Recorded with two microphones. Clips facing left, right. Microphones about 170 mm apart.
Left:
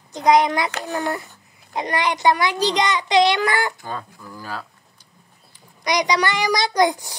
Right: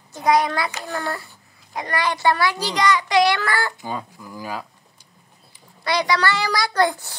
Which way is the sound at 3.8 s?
10° right (ahead or behind).